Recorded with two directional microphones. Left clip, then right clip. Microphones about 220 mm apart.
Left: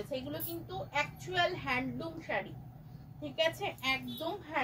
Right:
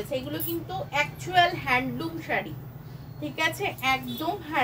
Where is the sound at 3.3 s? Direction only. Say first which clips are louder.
Right 5 dB; 10° right (ahead or behind).